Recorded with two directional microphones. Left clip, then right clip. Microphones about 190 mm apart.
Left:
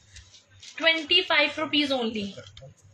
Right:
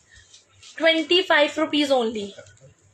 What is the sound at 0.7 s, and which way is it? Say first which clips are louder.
Speech: right 3 dB; 15° right (ahead or behind).